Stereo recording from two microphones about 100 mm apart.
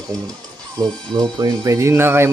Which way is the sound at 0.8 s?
45° right (ahead or behind).